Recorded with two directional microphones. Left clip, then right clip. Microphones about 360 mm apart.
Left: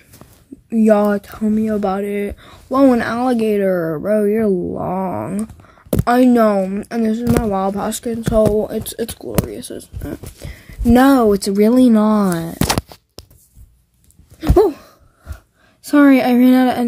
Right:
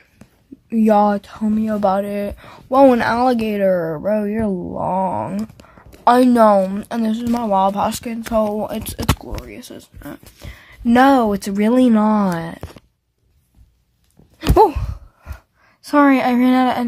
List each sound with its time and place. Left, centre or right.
0.7 s speech: centre
14.5 s gasp: centre
15.8 s a woman's voice: centre